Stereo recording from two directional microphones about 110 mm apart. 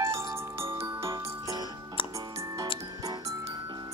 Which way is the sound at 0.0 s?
25° right (ahead or behind).